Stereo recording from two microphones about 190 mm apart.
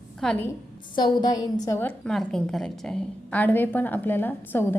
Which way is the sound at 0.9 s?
20° left (ahead or behind).